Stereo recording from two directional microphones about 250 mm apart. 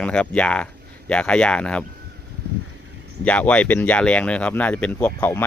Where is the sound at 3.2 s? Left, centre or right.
Centre.